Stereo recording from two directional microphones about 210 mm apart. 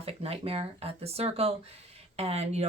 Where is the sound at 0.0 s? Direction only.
30° right (ahead or behind).